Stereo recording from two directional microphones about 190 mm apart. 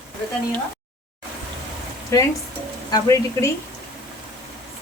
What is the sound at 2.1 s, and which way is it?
A woman's voice, 15° left (ahead or behind).